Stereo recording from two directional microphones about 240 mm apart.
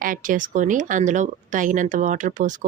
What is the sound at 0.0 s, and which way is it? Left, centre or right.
Speech, right.